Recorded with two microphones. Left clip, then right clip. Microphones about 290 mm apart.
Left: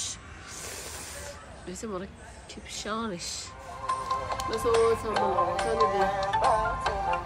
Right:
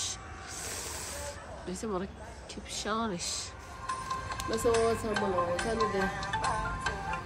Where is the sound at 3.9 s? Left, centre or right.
Left.